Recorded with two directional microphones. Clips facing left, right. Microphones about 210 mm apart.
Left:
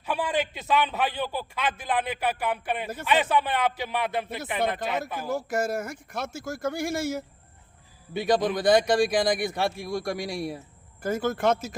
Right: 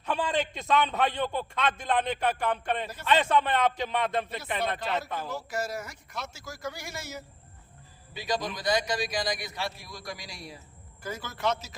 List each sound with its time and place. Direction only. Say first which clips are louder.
0.0 s a man's voice: left 1 dB; 10° left (ahead or behind)
5.3 s a man's voice: left 9 dB; 50° left (ahead or behind)